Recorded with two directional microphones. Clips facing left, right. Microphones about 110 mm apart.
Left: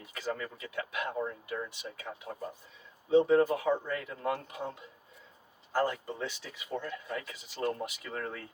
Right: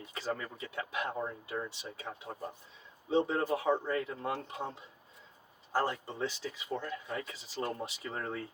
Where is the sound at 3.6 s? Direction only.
25° right (ahead or behind).